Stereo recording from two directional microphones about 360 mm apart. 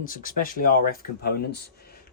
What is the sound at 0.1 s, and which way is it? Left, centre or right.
Speech, left.